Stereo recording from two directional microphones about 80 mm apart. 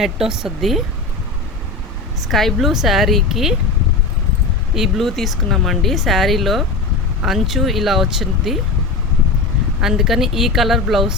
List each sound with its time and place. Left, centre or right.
0.0 s speech: centre
2.2 s speech: centre
4.7 s speech: centre
9.8 s speech: centre